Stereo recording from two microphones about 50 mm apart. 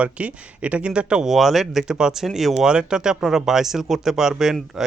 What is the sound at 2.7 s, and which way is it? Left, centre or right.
Speech, centre.